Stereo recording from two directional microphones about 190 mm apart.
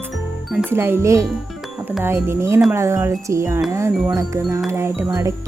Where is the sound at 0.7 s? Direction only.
15° right (ahead or behind).